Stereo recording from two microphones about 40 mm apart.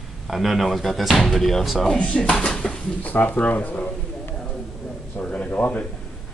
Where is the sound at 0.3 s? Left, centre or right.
Centre.